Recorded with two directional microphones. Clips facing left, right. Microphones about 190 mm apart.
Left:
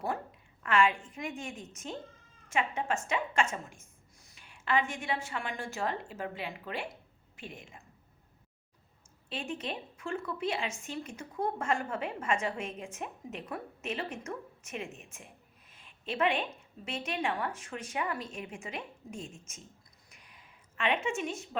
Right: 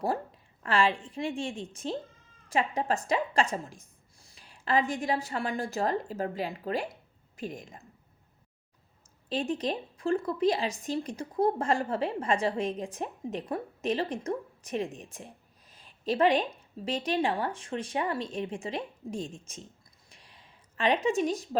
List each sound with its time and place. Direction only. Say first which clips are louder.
0.0 s a woman's voice: right 5 dB; 35° right (ahead or behind)
9.3 s a woman's voice: right 7 dB; 35° right (ahead or behind)
20.1 s a sound: right 2 dB; 30° right (ahead or behind)